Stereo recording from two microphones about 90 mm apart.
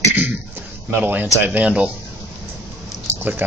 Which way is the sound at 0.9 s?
20° right (ahead or behind).